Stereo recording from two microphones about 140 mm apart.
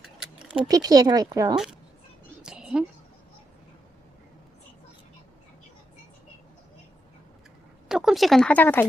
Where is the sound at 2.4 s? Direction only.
5° right (ahead or behind).